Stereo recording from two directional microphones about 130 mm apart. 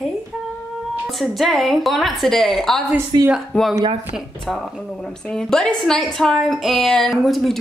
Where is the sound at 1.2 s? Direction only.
Centre (ahead or behind).